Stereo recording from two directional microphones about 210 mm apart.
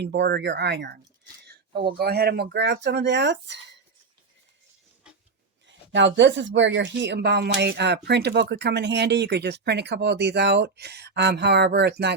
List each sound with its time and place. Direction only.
0.0 s speech: 55° right (ahead or behind)
1.5 s a sound: 50° right (ahead or behind)
2.0 s speech: 50° right (ahead or behind)
5.6 s speech: 60° right (ahead or behind)